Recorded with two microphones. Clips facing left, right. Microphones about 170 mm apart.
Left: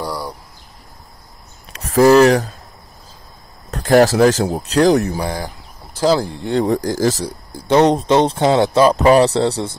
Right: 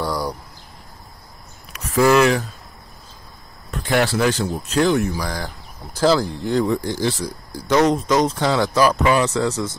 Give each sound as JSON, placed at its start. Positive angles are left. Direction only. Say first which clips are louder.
{"t": 0.0, "sound": "a sound", "louder": "right 1 dB", "side_deg": 5}
{"t": 1.7, "sound": "speech", "louder": "left 5 dB", "side_deg": 35}
{"t": 3.7, "sound": "speech", "louder": "left 8 dB", "side_deg": 40}
{"t": 5.2, "sound": "speech", "louder": "left 4 dB", "side_deg": 25}
{"t": 7.2, "sound": "speech", "louder": "left 3 dB", "side_deg": 30}
{"t": 9.0, "sound": "speech", "louder": "left 6 dB", "side_deg": 35}